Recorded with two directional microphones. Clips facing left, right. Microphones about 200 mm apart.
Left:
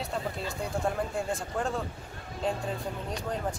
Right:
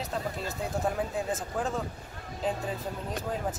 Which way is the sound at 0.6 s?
Centre (ahead or behind).